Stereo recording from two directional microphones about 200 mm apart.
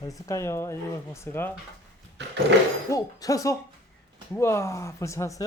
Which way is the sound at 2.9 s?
15° left (ahead or behind).